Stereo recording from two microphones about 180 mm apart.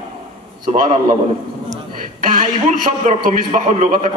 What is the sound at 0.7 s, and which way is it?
Speech, 40° right (ahead or behind).